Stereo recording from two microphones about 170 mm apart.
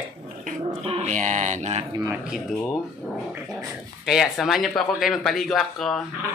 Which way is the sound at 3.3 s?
5° right (ahead or behind).